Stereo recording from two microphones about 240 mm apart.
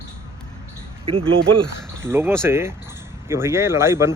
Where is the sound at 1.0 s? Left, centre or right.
Right.